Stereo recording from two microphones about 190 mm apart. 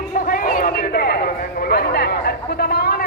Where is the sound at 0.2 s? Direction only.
50° left (ahead or behind).